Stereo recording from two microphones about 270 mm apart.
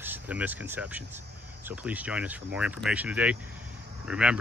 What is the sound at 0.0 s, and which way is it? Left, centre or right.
Speech, centre.